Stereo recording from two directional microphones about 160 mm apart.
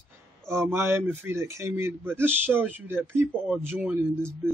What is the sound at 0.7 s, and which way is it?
Speech, 15° right (ahead or behind).